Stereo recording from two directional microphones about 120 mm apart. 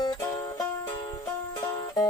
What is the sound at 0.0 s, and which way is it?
Music, 35° left (ahead or behind).